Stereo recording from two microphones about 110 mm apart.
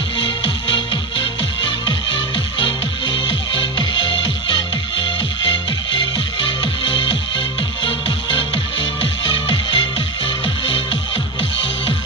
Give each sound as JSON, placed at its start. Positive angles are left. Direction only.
{"t": 0.2, "sound": "music", "side_deg": 50}